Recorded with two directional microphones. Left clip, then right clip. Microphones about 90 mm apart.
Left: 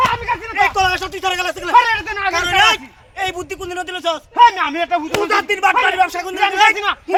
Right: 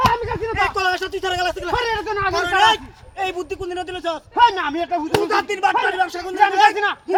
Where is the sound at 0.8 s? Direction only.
10° left (ahead or behind).